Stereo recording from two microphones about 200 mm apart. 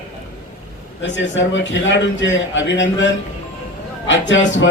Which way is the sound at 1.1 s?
65° left (ahead or behind).